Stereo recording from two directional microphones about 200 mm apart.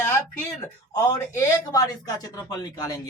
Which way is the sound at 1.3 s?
15° left (ahead or behind).